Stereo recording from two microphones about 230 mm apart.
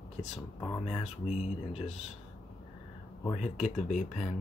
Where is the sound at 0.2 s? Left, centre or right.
Left.